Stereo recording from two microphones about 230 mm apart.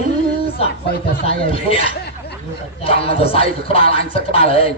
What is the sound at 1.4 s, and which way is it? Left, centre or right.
A man's voice, left.